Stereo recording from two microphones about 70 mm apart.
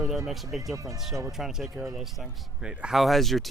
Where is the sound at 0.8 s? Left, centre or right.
Right.